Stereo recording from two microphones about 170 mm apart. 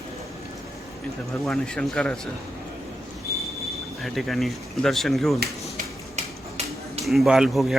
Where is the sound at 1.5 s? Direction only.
5° left (ahead or behind).